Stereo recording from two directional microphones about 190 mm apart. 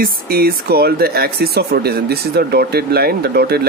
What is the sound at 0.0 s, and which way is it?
Speech, 55° right (ahead or behind).